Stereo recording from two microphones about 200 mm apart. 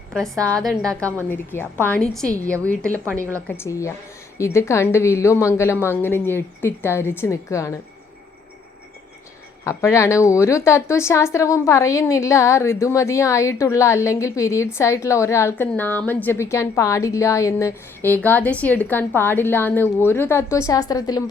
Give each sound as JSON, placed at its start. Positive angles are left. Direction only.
{"t": 0.3, "sound": "a woman's voice", "side_deg": -15}
{"t": 0.6, "sound": "a woman's voice", "side_deg": 0}
{"t": 9.6, "sound": "a woman's voice", "side_deg": 15}